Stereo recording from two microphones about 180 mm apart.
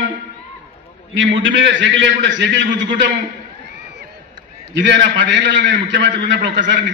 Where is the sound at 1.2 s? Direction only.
90° right.